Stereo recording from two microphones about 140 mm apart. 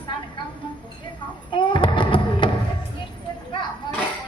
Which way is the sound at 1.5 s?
35° left (ahead or behind).